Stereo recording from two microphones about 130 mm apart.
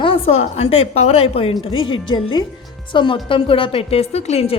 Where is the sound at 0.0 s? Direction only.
45° left (ahead or behind).